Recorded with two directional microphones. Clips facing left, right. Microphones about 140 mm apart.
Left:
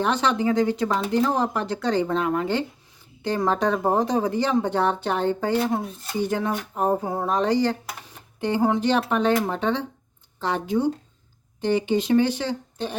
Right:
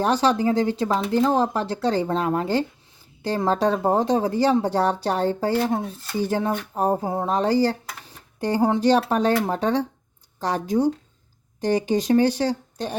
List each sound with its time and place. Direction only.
0.0 s speech: 35° right (ahead or behind)